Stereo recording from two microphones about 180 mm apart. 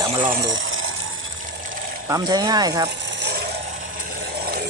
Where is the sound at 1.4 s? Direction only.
50° right (ahead or behind).